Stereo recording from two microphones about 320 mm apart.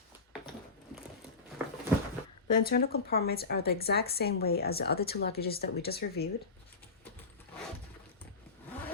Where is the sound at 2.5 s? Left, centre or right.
Left.